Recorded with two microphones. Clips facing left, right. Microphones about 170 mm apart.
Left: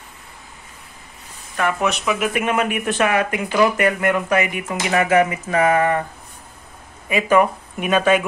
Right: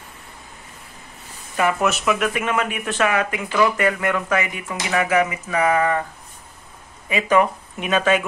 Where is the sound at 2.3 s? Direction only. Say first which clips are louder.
Left 3 dB; 15° left (ahead or behind).